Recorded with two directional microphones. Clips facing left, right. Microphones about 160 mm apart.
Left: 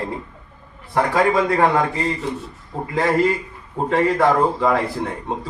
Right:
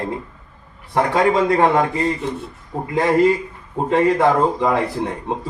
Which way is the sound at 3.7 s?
20° right (ahead or behind).